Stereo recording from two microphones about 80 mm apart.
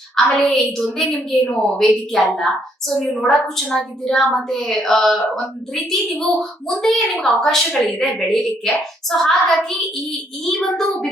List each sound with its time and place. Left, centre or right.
0.3 s a woman's voice: centre